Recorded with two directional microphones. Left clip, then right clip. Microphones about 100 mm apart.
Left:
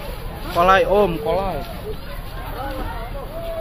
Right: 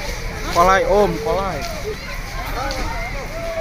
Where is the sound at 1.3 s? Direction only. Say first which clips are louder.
Right 1 dB; 20° left (ahead or behind).